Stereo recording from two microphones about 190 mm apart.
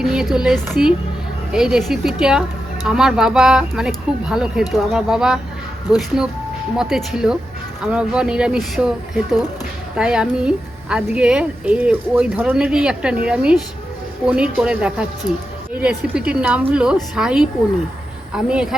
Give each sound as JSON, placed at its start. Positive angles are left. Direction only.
{"t": 0.0, "sound": "a woman's voice", "side_deg": 0}
{"t": 9.9, "sound": "a woman's voice", "side_deg": -5}